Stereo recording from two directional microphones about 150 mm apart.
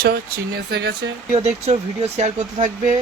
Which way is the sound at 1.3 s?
45° right (ahead or behind).